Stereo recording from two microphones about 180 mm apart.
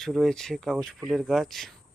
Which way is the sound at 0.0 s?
Centre (ahead or behind).